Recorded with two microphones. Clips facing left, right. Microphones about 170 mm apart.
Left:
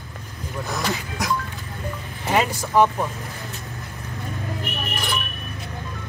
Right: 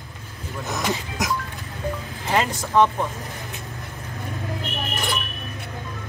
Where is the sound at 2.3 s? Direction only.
10° left (ahead or behind).